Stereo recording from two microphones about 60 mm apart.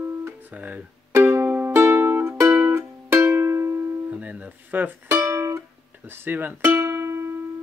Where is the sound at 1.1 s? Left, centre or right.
Right.